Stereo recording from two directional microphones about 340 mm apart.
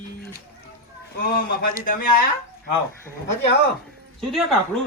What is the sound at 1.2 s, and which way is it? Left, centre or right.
Speech, left.